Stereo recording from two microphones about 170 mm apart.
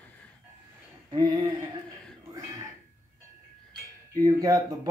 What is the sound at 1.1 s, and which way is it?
Speech, 25° right (ahead or behind).